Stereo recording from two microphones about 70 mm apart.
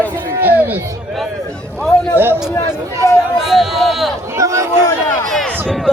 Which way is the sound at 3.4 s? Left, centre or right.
Centre.